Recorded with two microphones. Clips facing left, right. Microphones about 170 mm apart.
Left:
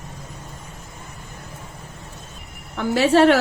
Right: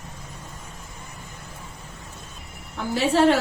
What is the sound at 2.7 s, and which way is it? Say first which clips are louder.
Speech: left 5 dB; 75° left (ahead or behind).